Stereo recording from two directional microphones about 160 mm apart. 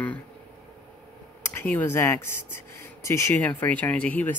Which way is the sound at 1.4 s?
15° left (ahead or behind).